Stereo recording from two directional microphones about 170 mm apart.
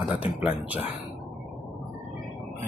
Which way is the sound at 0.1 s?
10° right (ahead or behind).